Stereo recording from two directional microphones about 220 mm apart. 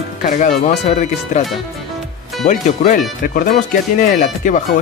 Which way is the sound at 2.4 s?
35° left (ahead or behind).